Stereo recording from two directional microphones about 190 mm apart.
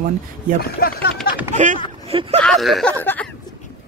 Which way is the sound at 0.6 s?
55° left (ahead or behind).